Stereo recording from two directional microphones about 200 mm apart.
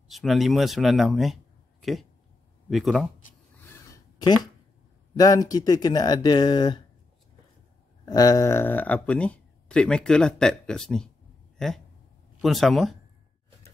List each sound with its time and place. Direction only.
0.1 s a man's voice: centre (ahead or behind)
3.8 s a sound: 20° left (ahead or behind)
5.1 s speech: 20° left (ahead or behind)
8.0 s speech: 20° left (ahead or behind); by 11.1 s 5° left (ahead or behind)
11.5 s a sound: centre (ahead or behind)
12.4 s speech: centre (ahead or behind)